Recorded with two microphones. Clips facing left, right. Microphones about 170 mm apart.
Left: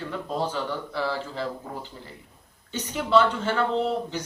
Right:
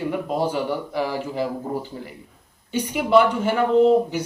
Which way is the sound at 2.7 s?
10° right (ahead or behind).